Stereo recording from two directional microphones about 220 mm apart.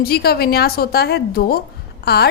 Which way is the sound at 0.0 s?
45° left (ahead or behind).